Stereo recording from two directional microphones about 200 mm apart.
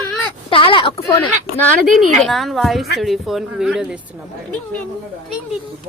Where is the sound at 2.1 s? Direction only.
Centre (ahead or behind).